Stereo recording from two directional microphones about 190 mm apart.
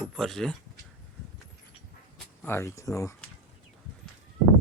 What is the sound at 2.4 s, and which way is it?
Speech, 15° left (ahead or behind).